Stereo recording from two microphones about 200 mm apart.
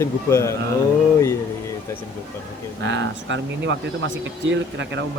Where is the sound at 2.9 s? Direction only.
65° right (ahead or behind).